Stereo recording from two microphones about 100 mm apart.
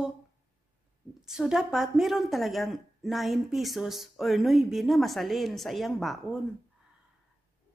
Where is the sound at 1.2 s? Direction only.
5° right (ahead or behind).